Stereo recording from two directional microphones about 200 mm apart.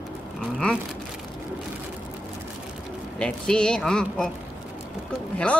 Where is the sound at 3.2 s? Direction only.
5° left (ahead or behind).